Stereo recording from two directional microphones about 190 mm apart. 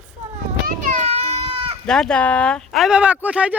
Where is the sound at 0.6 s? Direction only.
40° right (ahead or behind).